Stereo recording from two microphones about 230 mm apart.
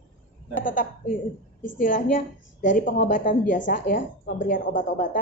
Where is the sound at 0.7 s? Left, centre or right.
Left.